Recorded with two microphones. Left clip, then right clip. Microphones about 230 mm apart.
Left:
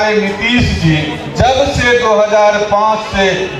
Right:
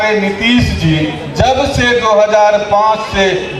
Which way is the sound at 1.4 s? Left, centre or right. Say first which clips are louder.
Left 1 dB; right.